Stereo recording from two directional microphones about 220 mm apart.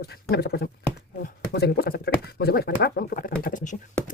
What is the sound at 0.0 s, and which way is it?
Speech, 45° left (ahead or behind).